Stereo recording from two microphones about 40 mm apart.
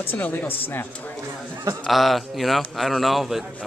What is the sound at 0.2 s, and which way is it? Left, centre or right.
Speech, left.